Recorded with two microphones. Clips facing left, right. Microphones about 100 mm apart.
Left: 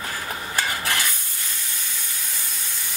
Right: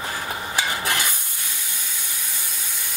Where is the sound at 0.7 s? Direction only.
20° right (ahead or behind).